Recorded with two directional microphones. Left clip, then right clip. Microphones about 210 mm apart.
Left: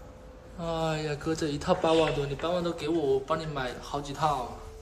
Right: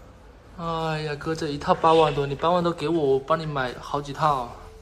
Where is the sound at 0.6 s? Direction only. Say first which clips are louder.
Right 3 dB; centre (ahead or behind).